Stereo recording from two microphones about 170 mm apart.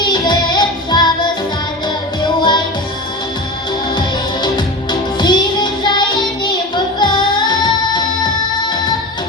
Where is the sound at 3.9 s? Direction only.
25° left (ahead or behind).